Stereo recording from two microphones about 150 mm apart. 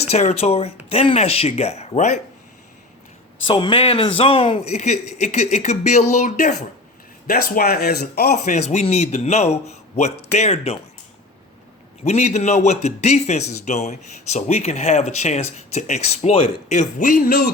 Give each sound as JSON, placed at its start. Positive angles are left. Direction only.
{"t": 0.1, "sound": "speech", "side_deg": 45}
{"t": 3.4, "sound": "speech", "side_deg": 35}
{"t": 7.3, "sound": "speech", "side_deg": 85}
{"t": 8.4, "sound": "speech", "side_deg": 45}
{"t": 12.0, "sound": "speech", "side_deg": 45}